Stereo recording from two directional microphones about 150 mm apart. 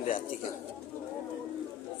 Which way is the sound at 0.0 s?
60° left (ahead or behind).